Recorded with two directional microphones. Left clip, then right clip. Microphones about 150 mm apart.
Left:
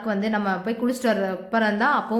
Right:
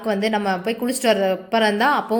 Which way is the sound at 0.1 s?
15° right (ahead or behind).